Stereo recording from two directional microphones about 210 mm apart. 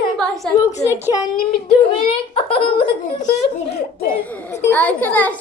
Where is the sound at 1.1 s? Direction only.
20° left (ahead or behind).